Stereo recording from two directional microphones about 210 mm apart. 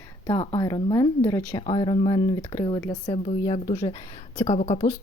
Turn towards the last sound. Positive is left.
turn(degrees=30)  # may be behind; listen again after turning